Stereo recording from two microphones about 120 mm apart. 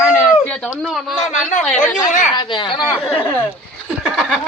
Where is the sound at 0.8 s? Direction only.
Centre (ahead or behind).